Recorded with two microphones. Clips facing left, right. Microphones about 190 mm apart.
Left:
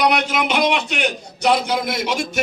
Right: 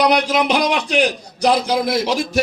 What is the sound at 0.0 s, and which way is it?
A man's voice, 35° right (ahead or behind).